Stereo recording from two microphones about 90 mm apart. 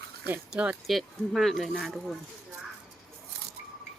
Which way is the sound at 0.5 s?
10° right (ahead or behind).